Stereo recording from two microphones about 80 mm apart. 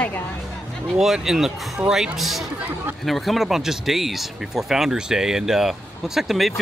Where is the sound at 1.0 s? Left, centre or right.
Centre.